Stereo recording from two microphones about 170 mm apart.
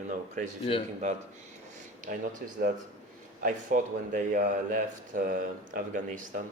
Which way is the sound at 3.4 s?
50° right (ahead or behind).